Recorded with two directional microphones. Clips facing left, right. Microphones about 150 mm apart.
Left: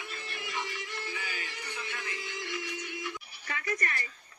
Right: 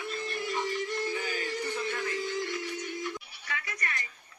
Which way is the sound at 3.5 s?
40° left (ahead or behind).